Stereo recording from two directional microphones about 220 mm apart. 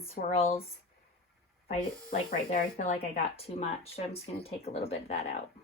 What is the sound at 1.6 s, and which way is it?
Speech, 40° left (ahead or behind).